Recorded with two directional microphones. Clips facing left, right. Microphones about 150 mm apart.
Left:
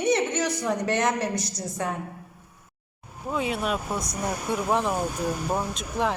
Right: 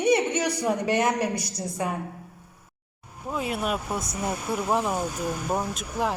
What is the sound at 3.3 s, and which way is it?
Speech, 5° right (ahead or behind).